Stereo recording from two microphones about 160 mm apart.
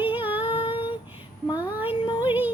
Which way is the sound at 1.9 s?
30° left (ahead or behind).